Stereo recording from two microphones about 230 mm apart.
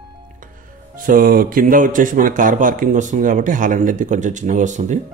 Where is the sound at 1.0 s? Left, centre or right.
Right.